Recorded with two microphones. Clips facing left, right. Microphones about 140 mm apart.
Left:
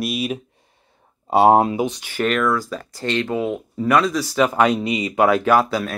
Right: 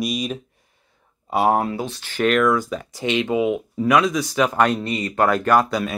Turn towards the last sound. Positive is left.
turn(degrees=5)  # may be behind; listen again after turning